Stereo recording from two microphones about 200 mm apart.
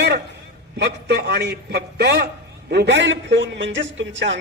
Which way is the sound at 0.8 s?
55° right (ahead or behind).